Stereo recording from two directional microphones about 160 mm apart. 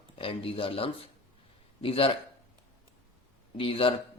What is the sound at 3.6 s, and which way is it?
Speech, 35° left (ahead or behind).